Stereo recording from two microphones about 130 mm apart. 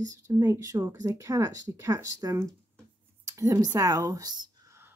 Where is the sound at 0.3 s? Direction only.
25° right (ahead or behind).